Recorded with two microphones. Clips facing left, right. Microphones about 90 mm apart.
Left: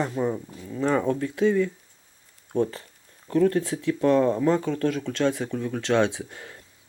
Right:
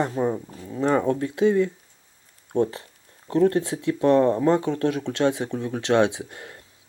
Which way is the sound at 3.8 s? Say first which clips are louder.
Right 2 dB; 20° right (ahead or behind).